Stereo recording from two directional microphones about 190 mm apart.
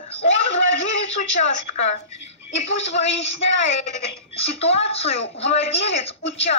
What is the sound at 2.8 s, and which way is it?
A woman's voice, 35° left (ahead or behind).